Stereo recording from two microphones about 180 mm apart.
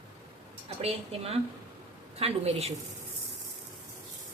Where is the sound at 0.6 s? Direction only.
35° right (ahead or behind).